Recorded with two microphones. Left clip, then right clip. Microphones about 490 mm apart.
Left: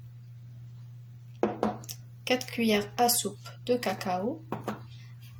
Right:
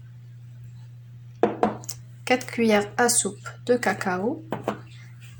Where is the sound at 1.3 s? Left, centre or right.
Left.